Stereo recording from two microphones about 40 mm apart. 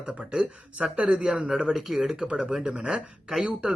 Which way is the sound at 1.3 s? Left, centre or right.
Centre.